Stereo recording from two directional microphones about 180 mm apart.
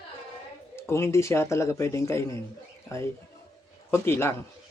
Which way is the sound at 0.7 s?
15° left (ahead or behind).